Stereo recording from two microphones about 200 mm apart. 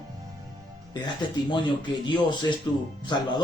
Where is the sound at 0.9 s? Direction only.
20° left (ahead or behind).